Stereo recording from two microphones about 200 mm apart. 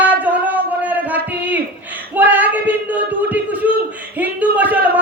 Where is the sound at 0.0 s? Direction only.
10° right (ahead or behind).